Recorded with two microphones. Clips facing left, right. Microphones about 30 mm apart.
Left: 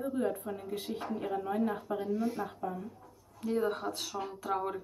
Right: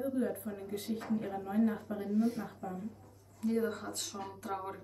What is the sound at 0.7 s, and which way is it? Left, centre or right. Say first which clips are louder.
Speech: right 2 dB; left.